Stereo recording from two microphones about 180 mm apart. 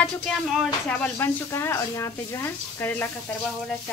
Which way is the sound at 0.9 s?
10° left (ahead or behind).